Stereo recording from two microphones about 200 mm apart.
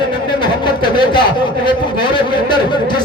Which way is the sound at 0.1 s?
25° left (ahead or behind).